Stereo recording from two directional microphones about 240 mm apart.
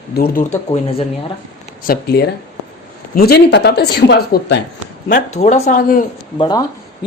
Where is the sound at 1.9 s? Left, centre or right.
Left.